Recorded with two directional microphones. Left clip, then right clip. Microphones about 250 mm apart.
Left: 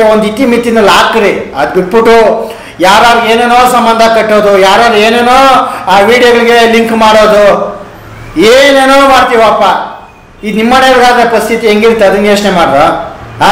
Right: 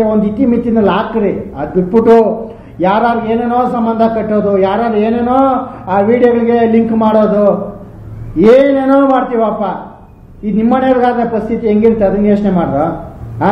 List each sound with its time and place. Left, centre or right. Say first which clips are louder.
0.0 s a man's voice: left 7 dB; centre
2.8 s a man's voice: left 8 dB; centre
7.2 s speech: left 7 dB; left
8.7 s a man's voice: left 7 dB; centre